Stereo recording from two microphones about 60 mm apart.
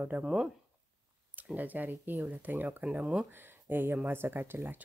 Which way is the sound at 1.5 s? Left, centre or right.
Right.